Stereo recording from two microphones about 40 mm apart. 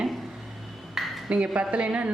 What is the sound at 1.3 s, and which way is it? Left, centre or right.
Speech, right.